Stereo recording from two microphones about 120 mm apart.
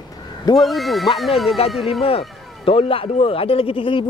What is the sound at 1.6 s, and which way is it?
Speech, 55° left (ahead or behind).